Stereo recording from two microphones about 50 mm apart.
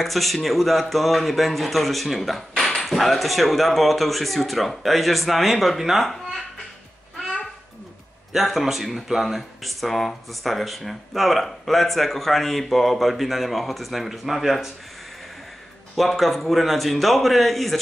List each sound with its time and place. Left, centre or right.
0.0 s a man's voice: centre
8.3 s a man's voice: centre
16.0 s a man's voice: centre